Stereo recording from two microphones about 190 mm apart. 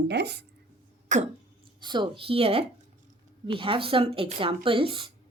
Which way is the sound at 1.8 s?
25° right (ahead or behind).